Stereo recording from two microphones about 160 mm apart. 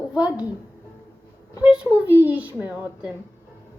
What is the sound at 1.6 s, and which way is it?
A child's voice, 5° right (ahead or behind).